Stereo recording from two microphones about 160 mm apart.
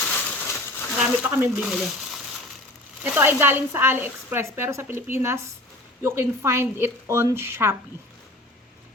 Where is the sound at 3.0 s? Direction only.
15° right (ahead or behind).